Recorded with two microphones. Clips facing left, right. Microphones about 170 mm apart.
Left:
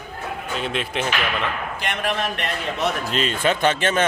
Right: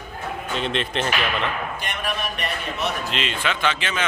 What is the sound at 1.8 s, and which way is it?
Speech, 90° left.